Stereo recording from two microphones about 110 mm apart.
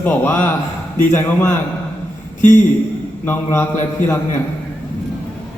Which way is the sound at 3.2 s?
20° left (ahead or behind).